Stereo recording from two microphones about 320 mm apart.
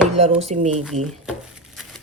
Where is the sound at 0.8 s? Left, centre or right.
Centre.